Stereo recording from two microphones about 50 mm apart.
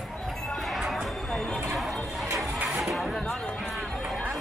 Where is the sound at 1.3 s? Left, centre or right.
Centre.